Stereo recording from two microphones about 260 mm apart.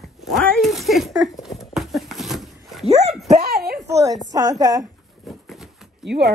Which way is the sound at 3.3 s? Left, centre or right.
Right.